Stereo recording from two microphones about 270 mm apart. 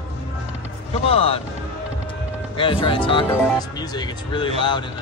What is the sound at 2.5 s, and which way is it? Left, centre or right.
Speech, centre.